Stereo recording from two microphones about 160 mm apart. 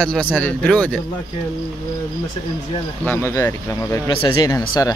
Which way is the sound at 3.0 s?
15° left (ahead or behind).